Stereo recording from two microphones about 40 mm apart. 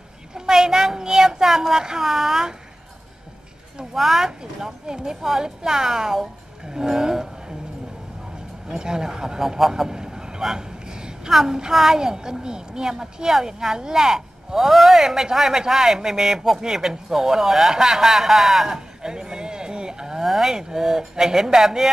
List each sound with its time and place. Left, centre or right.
0.3 s a sound: centre
3.9 s a woman's voice: centre
6.6 s roaring cats: centre
8.6 s a woman's voice: centre
9.6 s a sound: centre
11.3 s a woman's voice: centre
19.0 s speech: centre